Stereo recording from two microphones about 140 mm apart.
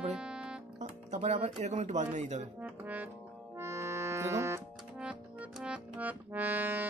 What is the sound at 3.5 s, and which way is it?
Music, 20° right (ahead or behind).